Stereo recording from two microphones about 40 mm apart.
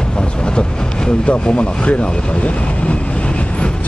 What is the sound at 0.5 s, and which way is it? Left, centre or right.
Vehicle, left.